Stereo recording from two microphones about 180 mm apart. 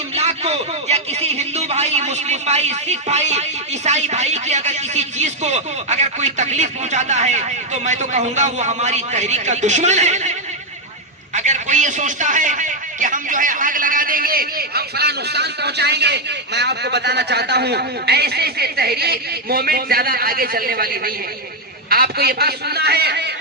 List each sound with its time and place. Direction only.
0.1 s a man's voice: 35° right (ahead or behind)
11.3 s a man's voice: 40° right (ahead or behind); by 23.3 s 65° right (ahead or behind)